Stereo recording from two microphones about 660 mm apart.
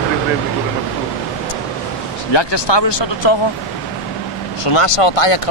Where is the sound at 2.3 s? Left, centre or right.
Left.